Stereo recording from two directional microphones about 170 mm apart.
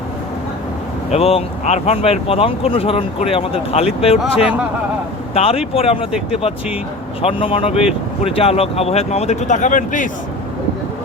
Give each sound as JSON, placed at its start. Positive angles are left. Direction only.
{"t": 1.1, "sound": "speech", "side_deg": 35}
{"t": 5.3, "sound": "speech", "side_deg": 35}
{"t": 6.1, "sound": "speech", "side_deg": -5}
{"t": 7.2, "sound": "speech", "side_deg": 35}